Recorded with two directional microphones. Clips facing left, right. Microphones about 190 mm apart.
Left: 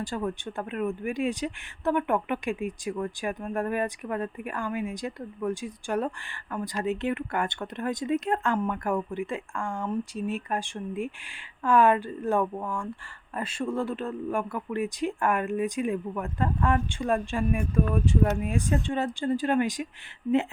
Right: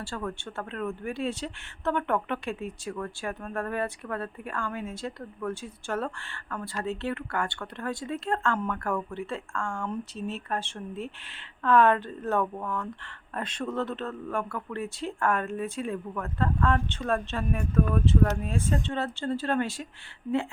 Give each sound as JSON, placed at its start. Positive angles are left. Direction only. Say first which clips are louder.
{"t": 0.0, "sound": "speech", "louder": "left 4 dB", "side_deg": 15}